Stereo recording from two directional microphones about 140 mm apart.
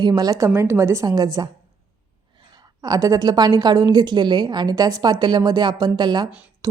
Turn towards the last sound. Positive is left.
turn(degrees=-30)  # may be behind; listen again after turning